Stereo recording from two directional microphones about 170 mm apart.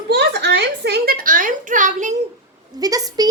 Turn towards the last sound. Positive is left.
turn(degrees=-20)  # may be behind; listen again after turning